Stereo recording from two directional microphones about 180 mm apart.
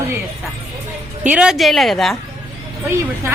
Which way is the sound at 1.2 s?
5° right (ahead or behind).